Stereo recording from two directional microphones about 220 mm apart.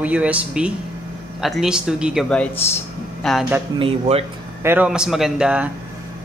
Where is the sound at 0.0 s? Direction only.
5° right (ahead or behind).